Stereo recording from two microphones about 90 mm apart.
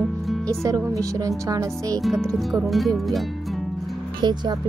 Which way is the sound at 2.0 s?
Centre (ahead or behind).